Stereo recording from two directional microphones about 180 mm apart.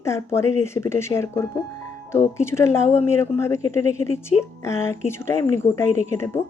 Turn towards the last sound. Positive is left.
turn(degrees=15)  # may be behind; listen again after turning